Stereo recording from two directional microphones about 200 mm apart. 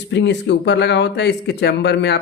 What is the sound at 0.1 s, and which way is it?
Speech, 60° left (ahead or behind).